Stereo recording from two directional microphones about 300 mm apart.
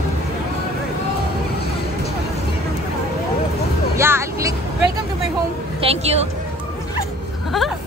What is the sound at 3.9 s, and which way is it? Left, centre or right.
Speech, centre.